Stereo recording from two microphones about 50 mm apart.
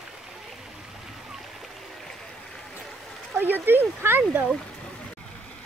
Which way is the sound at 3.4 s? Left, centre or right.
Right.